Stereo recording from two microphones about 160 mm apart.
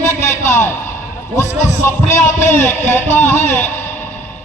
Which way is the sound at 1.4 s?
15° left (ahead or behind).